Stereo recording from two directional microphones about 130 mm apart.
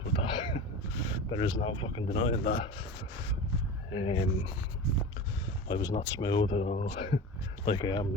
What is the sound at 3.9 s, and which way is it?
Speech, 45° left (ahead or behind).